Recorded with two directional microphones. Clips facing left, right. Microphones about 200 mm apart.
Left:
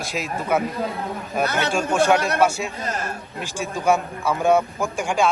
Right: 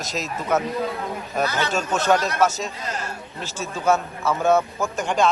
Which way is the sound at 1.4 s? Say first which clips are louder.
Left 1 dB; 60° left (ahead or behind).